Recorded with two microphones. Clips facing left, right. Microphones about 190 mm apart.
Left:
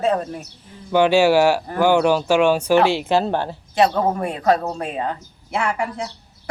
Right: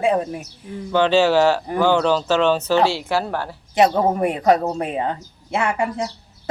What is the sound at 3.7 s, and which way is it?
Speech, 20° right (ahead or behind).